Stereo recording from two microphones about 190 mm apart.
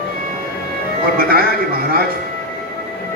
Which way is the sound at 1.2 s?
50° right (ahead or behind).